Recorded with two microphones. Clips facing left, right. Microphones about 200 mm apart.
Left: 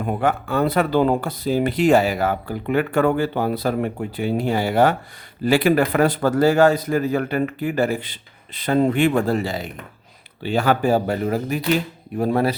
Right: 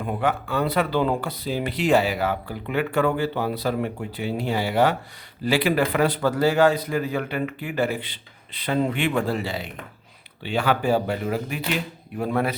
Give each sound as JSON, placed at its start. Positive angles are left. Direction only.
{"t": 0.0, "sound": "a man's voice", "side_deg": 45}